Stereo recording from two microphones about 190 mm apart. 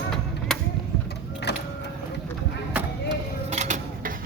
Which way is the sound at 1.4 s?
65° left (ahead or behind).